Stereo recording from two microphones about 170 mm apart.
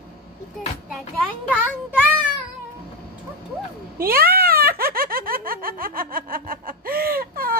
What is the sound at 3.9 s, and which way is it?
Speech, 60° right (ahead or behind).